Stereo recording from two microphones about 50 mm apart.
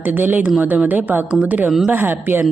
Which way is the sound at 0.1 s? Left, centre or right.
Right.